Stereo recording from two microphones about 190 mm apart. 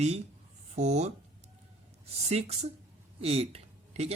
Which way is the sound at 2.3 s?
35° right (ahead or behind).